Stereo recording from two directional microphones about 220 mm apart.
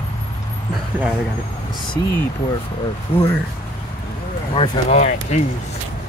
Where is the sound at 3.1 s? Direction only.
25° left (ahead or behind).